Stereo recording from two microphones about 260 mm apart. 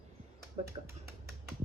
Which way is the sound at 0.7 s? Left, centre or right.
Centre.